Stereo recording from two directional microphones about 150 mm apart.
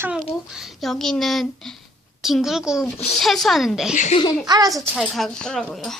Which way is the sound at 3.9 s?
55° left (ahead or behind).